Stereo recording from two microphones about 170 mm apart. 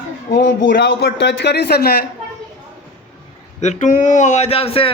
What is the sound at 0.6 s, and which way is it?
A man's voice, 70° left (ahead or behind).